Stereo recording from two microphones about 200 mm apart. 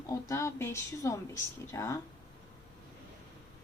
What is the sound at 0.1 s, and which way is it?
A woman's voice, 15° left (ahead or behind).